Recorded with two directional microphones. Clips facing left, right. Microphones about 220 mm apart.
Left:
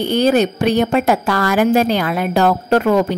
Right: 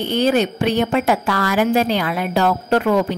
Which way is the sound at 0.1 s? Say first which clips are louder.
Left 2 dB; 40° left (ahead or behind).